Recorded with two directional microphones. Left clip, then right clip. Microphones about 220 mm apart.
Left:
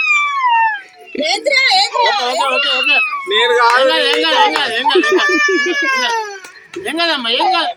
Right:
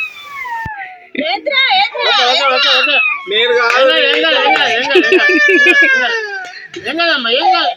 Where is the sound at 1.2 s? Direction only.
65° left (ahead or behind).